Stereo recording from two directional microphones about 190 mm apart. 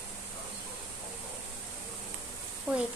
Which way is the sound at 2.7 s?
5° right (ahead or behind).